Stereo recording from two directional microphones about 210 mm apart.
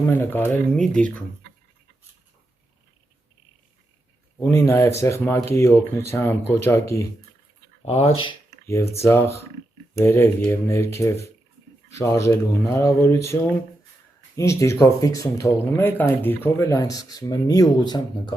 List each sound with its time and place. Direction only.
0.1 s speech: 10° left (ahead or behind)
4.4 s speech: 15° left (ahead or behind)
7.8 s speech: 30° left (ahead or behind)
8.6 s speech: 10° left (ahead or behind)